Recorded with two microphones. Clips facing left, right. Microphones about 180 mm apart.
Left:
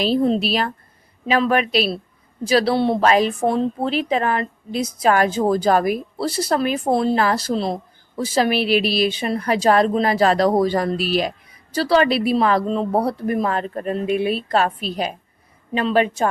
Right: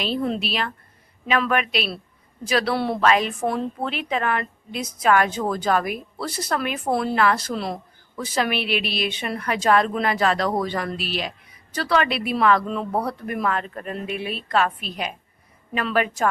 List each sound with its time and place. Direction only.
0.0 s a woman's voice: 35° left (ahead or behind)
3.0 s a woman's voice: 35° left (ahead or behind)